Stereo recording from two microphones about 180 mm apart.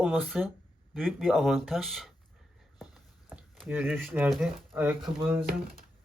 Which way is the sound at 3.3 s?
5° right (ahead or behind).